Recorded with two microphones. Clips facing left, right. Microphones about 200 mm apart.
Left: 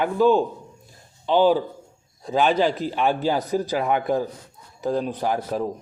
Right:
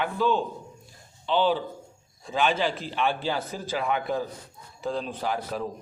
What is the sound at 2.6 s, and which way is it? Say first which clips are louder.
Mantra: left 6 dB; 45° left (ahead or behind).